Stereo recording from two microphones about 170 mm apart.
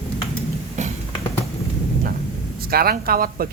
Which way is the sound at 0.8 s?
45° right (ahead or behind).